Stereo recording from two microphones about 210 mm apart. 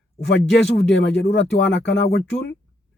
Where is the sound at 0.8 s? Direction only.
55° left (ahead or behind).